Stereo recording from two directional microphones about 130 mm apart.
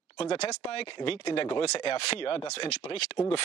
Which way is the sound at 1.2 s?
50° left (ahead or behind).